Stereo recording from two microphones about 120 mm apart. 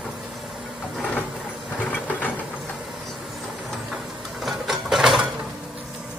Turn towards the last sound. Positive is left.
turn(degrees=-5)  # may be behind; listen again after turning